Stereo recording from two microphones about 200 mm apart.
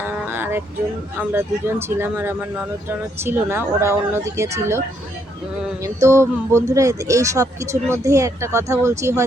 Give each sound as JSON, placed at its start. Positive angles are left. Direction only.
{"t": 0.3, "sound": "music", "side_deg": -10}
{"t": 1.2, "sound": "speech", "side_deg": -10}
{"t": 5.8, "sound": "speech", "side_deg": -15}